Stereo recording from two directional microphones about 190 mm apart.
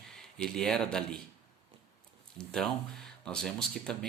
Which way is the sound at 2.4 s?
5° left (ahead or behind).